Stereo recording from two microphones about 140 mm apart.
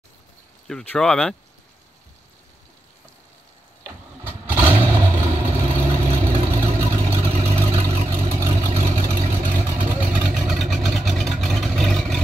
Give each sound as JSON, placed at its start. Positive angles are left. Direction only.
{"t": 0.7, "sound": "speech", "side_deg": 5}
{"t": 3.8, "sound": "vehicle", "side_deg": -15}